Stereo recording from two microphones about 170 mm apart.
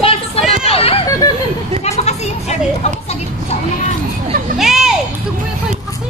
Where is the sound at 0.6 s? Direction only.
35° left (ahead or behind).